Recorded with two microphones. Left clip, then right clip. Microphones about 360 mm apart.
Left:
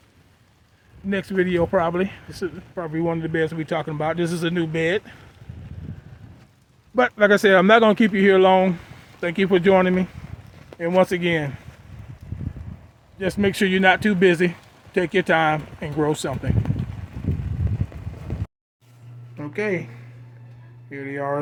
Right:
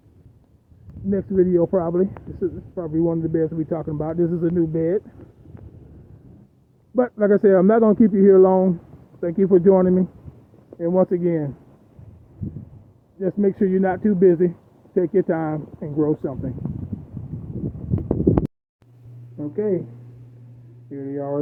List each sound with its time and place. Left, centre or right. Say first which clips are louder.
1.1 s speech: right 3 dB; centre
6.9 s speech: left 2 dB; centre
13.1 s speech: right 1 dB; centre
19.4 s a sound: right 2 dB; centre
20.9 s speech: left 1 dB; centre